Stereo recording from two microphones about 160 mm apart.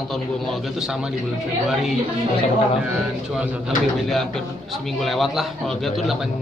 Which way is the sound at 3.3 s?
5° right (ahead or behind).